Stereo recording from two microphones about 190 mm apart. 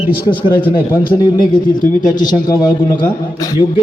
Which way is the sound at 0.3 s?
25° left (ahead or behind).